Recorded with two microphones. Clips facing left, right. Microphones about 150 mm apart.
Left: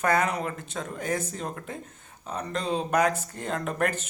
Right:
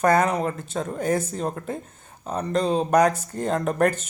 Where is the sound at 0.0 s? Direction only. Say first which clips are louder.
Right 5 dB; 40° right (ahead or behind).